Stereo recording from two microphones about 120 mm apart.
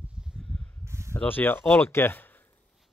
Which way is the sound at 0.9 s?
20° right (ahead or behind).